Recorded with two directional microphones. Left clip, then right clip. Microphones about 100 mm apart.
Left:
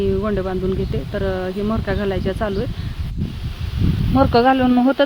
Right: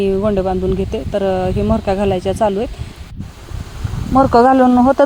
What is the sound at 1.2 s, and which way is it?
Speech, 20° right (ahead or behind).